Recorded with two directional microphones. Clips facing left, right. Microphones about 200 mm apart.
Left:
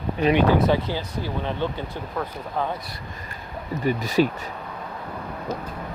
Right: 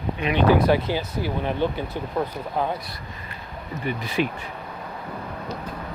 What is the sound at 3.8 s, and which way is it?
Speech, 40° left (ahead or behind).